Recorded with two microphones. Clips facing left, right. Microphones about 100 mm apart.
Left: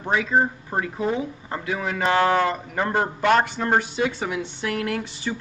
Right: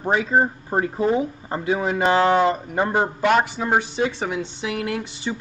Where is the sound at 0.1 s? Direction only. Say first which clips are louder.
Right 1 dB; 35° right (ahead or behind); by 3.8 s 5° right (ahead or behind).